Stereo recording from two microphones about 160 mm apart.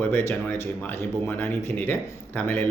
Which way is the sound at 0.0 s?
15° left (ahead or behind).